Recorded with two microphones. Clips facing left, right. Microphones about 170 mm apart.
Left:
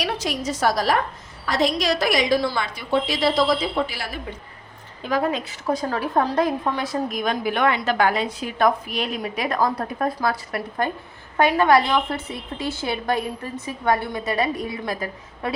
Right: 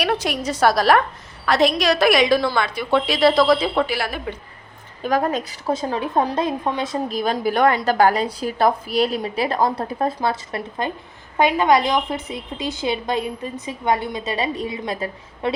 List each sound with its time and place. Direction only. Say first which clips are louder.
0.0 s a woman's voice: right 4 dB; 60° right (ahead or behind)
5.0 s a woman's voice: right 2 dB; 45° right (ahead or behind)
5.7 s a woman's voice: right 1 dB; 20° right (ahead or behind)
7.2 s a woman's voice: right 5 dB; 35° right (ahead or behind)